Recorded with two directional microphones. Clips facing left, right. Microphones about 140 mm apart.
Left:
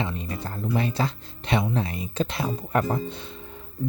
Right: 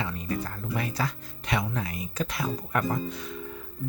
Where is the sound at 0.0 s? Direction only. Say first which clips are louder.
Left 1 dB; 25° left (ahead or behind).